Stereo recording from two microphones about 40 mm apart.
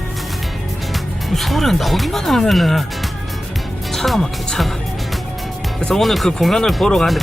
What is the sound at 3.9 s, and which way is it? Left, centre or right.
Speech, centre.